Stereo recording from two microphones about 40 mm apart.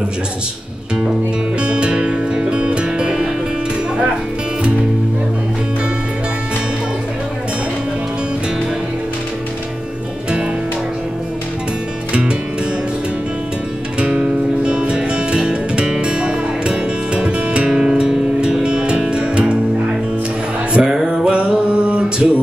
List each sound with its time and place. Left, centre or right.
1.6 s music: right
12.1 s music: right
13.9 s music: right
17.6 s music: centre
20.7 s music: centre